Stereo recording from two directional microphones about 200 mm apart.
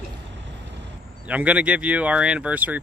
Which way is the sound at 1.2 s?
5° right (ahead or behind).